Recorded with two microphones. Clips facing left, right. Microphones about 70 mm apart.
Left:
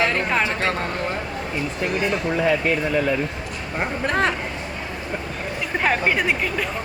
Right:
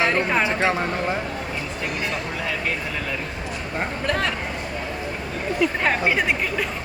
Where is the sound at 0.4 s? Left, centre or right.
Centre.